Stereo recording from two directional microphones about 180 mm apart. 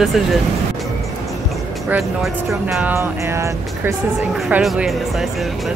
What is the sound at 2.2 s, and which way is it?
Speech, 5° right (ahead or behind).